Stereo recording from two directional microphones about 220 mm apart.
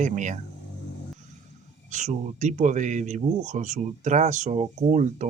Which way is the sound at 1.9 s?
35° right (ahead or behind).